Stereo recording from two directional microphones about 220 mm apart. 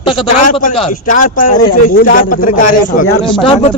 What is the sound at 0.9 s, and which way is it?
A man's voice, 35° left (ahead or behind).